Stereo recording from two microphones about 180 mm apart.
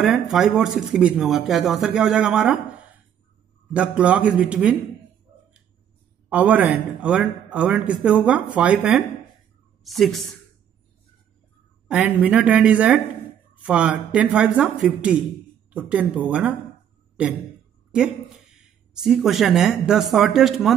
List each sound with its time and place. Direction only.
0.0 s speech: centre (ahead or behind)
3.7 s a man's voice: 5° right (ahead or behind)
6.2 s a man's voice: 10° right (ahead or behind)
11.9 s a man's voice: 5° right (ahead or behind)
18.6 s speech: 5° right (ahead or behind)